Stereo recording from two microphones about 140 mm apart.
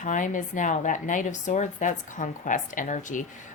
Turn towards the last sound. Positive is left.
turn(degrees=65)  # may be behind; listen again after turning